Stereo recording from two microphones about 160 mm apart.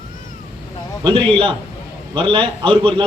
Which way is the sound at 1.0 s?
30° right (ahead or behind).